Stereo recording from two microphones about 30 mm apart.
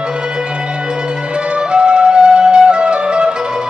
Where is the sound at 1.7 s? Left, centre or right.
Right.